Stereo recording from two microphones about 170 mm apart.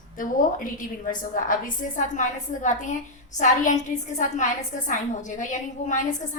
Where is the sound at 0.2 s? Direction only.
55° left (ahead or behind).